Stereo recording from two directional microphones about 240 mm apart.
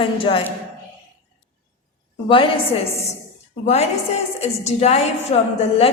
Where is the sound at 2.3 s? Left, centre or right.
Left.